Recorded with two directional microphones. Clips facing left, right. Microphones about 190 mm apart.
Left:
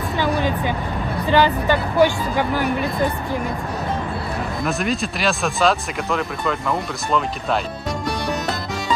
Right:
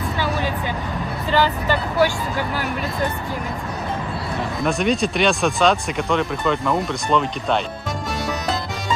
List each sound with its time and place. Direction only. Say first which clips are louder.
1.3 s speech: left 3 dB; 15° left (ahead or behind)
4.6 s speech: right 4 dB; centre (ahead or behind)